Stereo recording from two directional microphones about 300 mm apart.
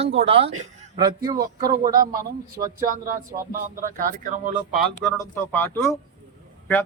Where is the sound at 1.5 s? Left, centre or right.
Right.